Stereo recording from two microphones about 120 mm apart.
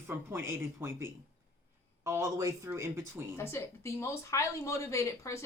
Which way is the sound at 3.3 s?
25° left (ahead or behind).